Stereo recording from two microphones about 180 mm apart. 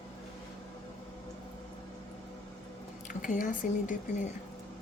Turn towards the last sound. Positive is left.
turn(degrees=45)  # may be behind; listen again after turning